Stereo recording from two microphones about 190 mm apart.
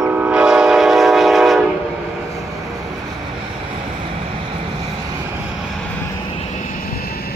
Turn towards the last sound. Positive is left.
turn(degrees=55)  # may be behind; listen again after turning